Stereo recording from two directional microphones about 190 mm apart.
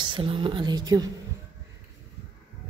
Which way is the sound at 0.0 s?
25° right (ahead or behind).